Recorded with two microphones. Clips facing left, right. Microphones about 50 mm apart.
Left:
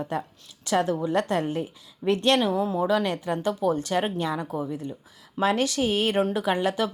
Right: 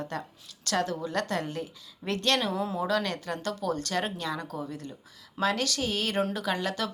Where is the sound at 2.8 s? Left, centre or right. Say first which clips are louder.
Left 5 dB; centre.